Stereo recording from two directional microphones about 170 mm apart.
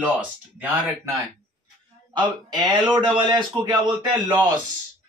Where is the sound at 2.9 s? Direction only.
25° right (ahead or behind).